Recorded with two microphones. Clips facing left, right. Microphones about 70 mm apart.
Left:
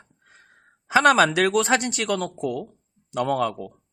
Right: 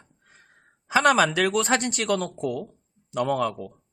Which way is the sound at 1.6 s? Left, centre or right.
Centre.